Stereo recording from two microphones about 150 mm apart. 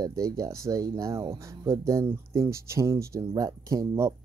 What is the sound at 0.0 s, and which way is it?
Speech, 25° right (ahead or behind).